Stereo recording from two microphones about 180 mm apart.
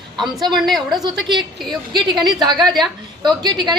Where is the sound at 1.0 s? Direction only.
25° right (ahead or behind).